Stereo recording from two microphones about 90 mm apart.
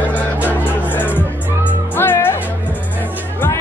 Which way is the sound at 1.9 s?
25° left (ahead or behind).